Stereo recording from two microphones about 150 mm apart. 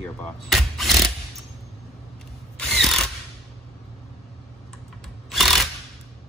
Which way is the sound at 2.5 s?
5° left (ahead or behind).